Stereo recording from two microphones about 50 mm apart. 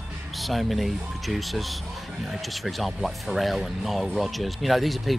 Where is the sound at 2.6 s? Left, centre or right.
Centre.